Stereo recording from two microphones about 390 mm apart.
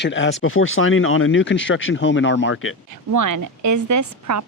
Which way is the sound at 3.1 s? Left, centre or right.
Right.